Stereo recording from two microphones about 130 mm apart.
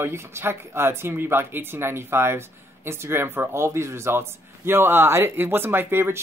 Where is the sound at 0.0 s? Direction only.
20° right (ahead or behind).